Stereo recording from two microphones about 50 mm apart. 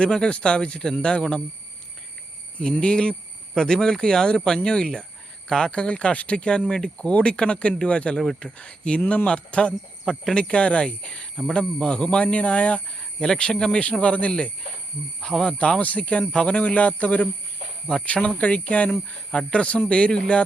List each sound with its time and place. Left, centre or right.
0.0 s speech: centre
2.6 s speech: centre
15.2 s speech: centre
15.8 s speech: left